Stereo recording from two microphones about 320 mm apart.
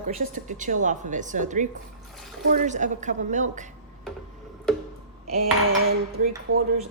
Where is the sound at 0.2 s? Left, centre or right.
Right.